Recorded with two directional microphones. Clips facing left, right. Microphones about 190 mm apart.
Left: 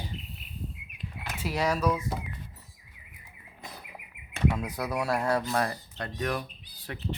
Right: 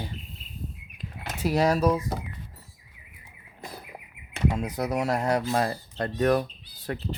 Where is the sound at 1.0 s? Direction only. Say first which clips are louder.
Right 6 dB; 40° right (ahead or behind).